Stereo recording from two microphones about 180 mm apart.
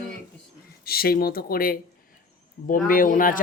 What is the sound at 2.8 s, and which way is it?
Speech, 50° left (ahead or behind).